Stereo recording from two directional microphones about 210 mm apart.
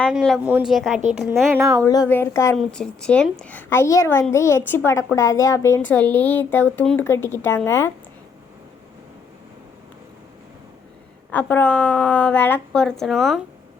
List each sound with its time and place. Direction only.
0.0 s a woman's voice: centre (ahead or behind)
1.5 s a woman's voice: 15° right (ahead or behind)
1.8 s speech: 15° left (ahead or behind)
11.3 s a woman's voice: 5° left (ahead or behind)